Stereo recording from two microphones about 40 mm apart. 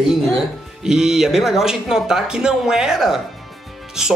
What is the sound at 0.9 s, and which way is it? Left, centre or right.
Speech, centre.